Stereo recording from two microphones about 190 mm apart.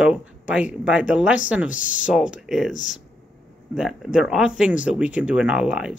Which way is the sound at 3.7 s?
Centre (ahead or behind).